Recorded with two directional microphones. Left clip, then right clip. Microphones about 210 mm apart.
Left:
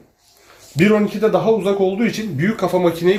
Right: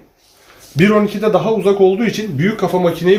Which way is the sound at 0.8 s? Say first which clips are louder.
Right 2 dB; 10° left (ahead or behind).